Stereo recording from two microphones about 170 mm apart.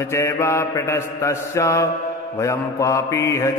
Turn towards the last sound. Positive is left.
turn(degrees=15)  # may be behind; listen again after turning